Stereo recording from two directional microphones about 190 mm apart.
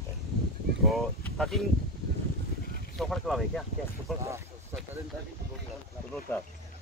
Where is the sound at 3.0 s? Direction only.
Centre (ahead or behind).